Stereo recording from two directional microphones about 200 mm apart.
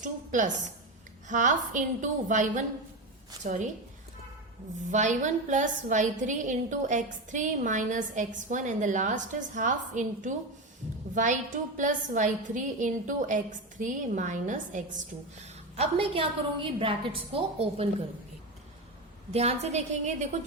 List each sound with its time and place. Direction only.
0.0 s a woman's voice: 40° right (ahead or behind)
4.9 s a woman's voice: 35° right (ahead or behind)
19.3 s a woman's voice: 30° right (ahead or behind)